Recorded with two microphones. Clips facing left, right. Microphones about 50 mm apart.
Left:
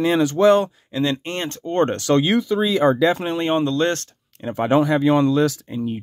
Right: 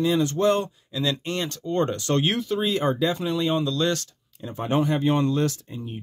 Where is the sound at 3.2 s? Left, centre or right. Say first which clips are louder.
Left 4 dB; left.